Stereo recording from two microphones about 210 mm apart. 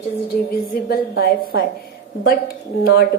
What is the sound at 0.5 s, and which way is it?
Speech, 45° left (ahead or behind).